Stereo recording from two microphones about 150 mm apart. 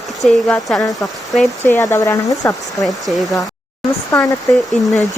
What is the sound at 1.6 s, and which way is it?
Speech, 20° left (ahead or behind).